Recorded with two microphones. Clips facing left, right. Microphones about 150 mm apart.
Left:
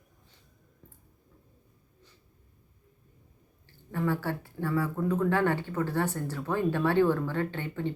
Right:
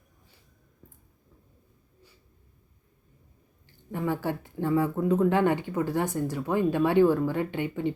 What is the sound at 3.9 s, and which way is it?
Speech, 15° right (ahead or behind).